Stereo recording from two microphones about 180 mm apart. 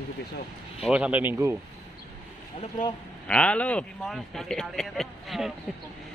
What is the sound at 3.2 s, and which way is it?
Speech, 5° left (ahead or behind).